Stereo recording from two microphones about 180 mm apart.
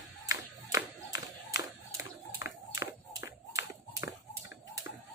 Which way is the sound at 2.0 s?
15° right (ahead or behind).